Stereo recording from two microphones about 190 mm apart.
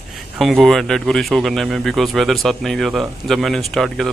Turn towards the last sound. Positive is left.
turn(degrees=0)  # may be behind; listen again after turning